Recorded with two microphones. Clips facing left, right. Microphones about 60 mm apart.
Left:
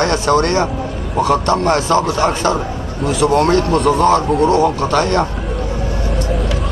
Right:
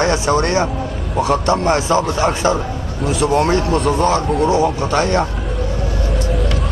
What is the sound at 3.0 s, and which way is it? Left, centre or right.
A man's voice, centre.